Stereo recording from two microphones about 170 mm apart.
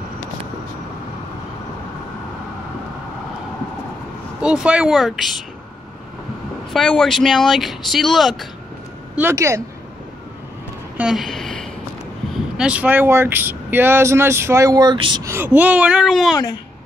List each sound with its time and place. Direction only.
4.4 s speech: 5° right (ahead or behind)
6.7 s speech: centre (ahead or behind)
9.2 s speech: 15° right (ahead or behind)
11.0 s a sound: centre (ahead or behind)
12.5 s speech: 5° right (ahead or behind); by 15.2 s 25° right (ahead or behind)
15.2 s speech: 15° right (ahead or behind)